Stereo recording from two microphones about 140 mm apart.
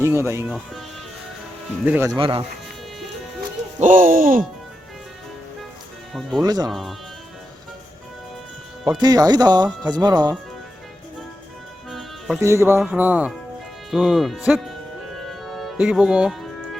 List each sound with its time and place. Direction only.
0.0 s speech: 20° right (ahead or behind)
0.4 s speech: 5° right (ahead or behind)
1.8 s speech: 10° right (ahead or behind)
2.0 s speech: 40° right (ahead or behind)
3.8 s speech: 65° right (ahead or behind)
6.4 s speech: 25° right (ahead or behind)
6.7 s speech: centre (ahead or behind)
9.0 s speech: 30° right (ahead or behind)
11.9 s music: centre (ahead or behind)
12.4 s speech: 20° right (ahead or behind)
13.9 s music: centre (ahead or behind)